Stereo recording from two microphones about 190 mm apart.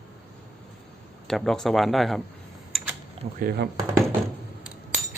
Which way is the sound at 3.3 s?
55° right (ahead or behind).